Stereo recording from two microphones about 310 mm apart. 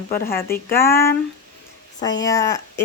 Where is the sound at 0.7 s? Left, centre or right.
Centre.